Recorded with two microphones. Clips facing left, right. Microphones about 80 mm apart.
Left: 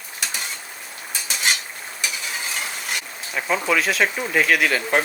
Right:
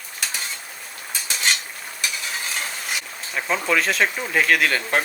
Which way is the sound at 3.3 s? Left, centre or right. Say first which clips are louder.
Left 1 dB; centre.